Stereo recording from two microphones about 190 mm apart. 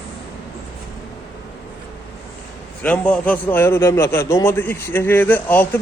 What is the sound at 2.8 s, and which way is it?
A man's voice, 5° left (ahead or behind).